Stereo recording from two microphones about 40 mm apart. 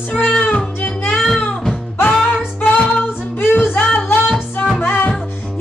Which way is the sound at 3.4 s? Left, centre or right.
Left.